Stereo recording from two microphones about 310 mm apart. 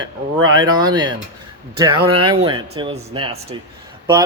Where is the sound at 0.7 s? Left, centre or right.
Centre.